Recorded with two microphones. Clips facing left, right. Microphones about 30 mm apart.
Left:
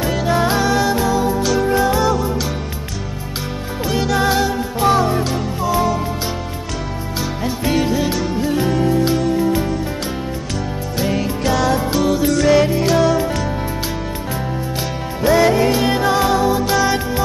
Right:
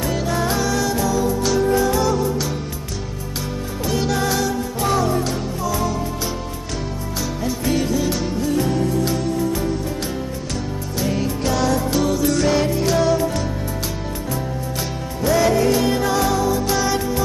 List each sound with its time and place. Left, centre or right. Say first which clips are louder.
0.3 s music: left 6 dB; left
4.2 s music: left 4 dB; left
7.4 s music: left 3 dB; left
12.3 s music: left 7 dB; centre
12.6 s music: left 3 dB; left
15.2 s music: left 3 dB; left